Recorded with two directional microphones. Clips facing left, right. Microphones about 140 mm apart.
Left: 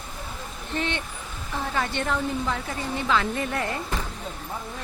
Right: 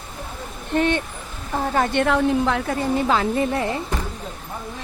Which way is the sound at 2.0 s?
70° right (ahead or behind).